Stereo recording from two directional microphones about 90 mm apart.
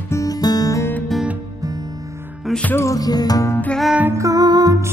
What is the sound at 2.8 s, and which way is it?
Music, 40° left (ahead or behind).